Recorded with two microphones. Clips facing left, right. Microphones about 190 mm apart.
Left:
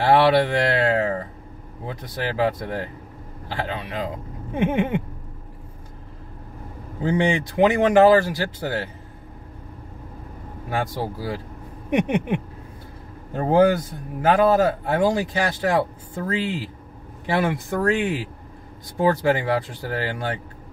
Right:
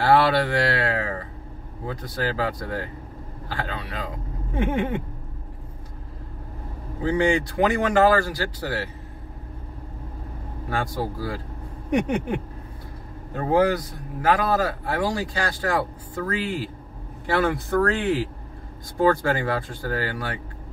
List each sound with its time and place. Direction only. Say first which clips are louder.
0.0 s speech: left 2 dB; 20° left (ahead or behind)
7.1 s speech: even; 20° left (ahead or behind)
10.7 s speech: left 1 dB; 20° left (ahead or behind)
13.3 s speech: left 3 dB; 30° left (ahead or behind)